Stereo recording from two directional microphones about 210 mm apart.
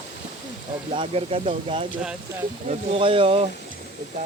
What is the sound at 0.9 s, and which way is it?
Speech, 30° right (ahead or behind).